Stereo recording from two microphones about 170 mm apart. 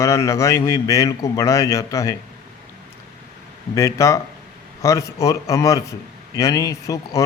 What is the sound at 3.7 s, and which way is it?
A man's voice, 20° left (ahead or behind).